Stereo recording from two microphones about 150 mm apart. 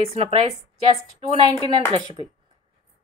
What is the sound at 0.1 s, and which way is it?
Speech, 40° right (ahead or behind).